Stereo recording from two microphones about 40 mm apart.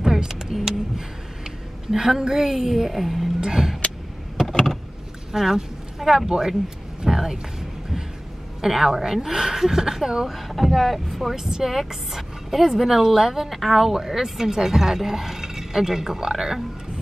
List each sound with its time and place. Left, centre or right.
0.0 s a sound: centre
3.3 s speech: centre
4.5 s vehicle: centre
5.3 s speech: centre
8.5 s speech: centre